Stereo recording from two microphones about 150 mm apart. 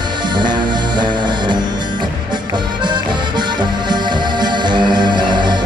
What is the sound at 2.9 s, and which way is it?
Music, 30° right (ahead or behind).